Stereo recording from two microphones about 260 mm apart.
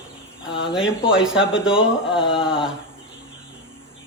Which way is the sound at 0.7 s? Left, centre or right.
Centre.